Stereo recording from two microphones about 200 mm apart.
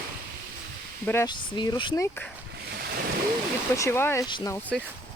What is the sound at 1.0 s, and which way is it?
Speech, 15° left (ahead or behind).